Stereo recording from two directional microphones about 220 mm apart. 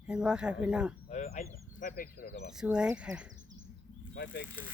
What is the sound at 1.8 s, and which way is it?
Speech, 40° left (ahead or behind).